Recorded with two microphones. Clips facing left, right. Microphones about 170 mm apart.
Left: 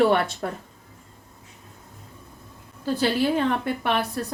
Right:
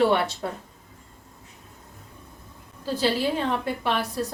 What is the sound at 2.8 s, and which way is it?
Speech, 55° left (ahead or behind).